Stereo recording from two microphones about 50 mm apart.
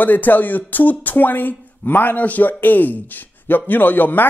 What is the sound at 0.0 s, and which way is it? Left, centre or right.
Speech, left.